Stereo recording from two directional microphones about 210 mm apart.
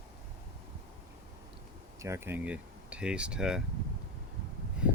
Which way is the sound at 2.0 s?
10° right (ahead or behind).